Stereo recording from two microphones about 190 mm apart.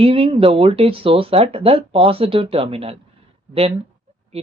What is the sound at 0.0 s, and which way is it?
Speech, 30° right (ahead or behind).